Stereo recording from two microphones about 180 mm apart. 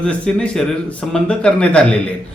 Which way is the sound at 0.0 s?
5° left (ahead or behind).